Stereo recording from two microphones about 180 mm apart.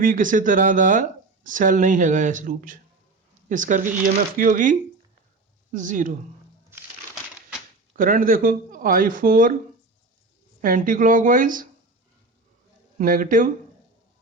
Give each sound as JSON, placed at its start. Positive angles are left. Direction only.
{"t": 0.0, "sound": "speech", "side_deg": -50}
{"t": 7.9, "sound": "speech", "side_deg": -50}
{"t": 10.6, "sound": "speech", "side_deg": -50}
{"t": 13.0, "sound": "speech", "side_deg": -50}